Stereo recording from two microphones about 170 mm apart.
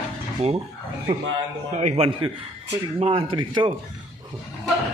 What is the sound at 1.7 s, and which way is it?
Speech, 40° right (ahead or behind).